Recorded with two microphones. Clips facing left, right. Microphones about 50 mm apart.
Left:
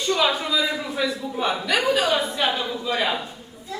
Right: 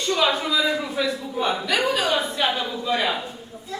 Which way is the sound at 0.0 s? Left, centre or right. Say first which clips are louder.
Even; centre.